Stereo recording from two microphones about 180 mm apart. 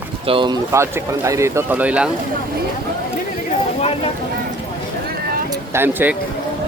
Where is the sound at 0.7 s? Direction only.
15° right (ahead or behind).